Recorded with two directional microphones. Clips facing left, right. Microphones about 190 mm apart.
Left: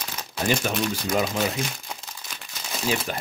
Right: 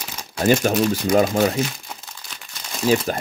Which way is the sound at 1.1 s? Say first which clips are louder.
Right 7 dB; 45° right (ahead or behind).